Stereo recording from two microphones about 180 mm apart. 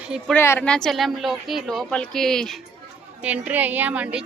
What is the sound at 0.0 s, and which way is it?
Speech, 5° right (ahead or behind).